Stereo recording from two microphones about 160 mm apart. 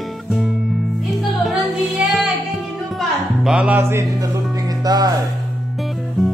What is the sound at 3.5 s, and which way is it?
Music, 10° right (ahead or behind).